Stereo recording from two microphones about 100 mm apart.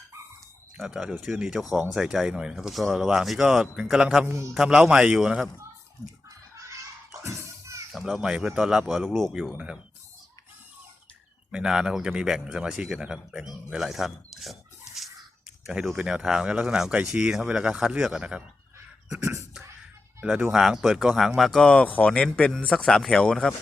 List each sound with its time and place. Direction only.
0.8 s speech: centre (ahead or behind)
6.7 s children playing: 30° right (ahead or behind)
7.9 s speech: 5° right (ahead or behind)
11.5 s speech: 5° right (ahead or behind)
15.6 s speech: 5° right (ahead or behind)
19.1 s beatboxing: 30° right (ahead or behind)
20.2 s speech: 5° right (ahead or behind)